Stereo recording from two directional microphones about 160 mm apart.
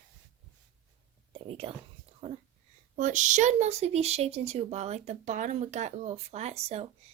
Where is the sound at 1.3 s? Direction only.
35° right (ahead or behind).